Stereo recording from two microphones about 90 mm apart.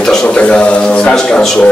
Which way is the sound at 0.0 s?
5° left (ahead or behind).